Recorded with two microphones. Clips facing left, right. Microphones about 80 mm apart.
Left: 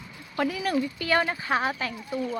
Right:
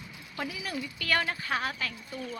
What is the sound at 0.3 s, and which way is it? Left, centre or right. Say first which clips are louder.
Speech: left 10 dB; left.